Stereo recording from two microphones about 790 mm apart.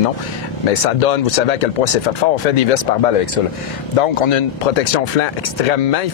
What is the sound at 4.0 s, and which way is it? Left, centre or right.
Speech, left.